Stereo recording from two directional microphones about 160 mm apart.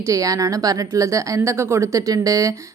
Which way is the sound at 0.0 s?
20° right (ahead or behind).